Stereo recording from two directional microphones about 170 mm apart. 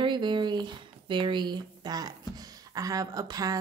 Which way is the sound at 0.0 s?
25° right (ahead or behind).